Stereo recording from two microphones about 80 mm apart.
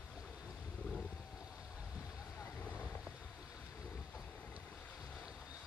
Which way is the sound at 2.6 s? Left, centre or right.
Left.